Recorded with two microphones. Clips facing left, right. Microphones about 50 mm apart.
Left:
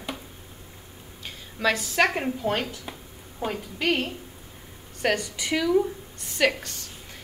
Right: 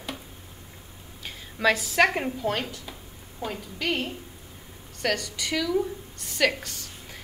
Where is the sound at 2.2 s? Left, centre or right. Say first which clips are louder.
Left 1 dB; centre.